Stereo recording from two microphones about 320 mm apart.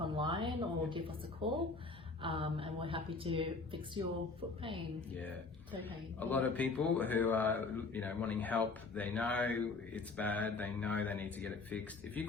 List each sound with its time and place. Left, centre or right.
0.0 s speech: centre
6.1 s a man's voice: centre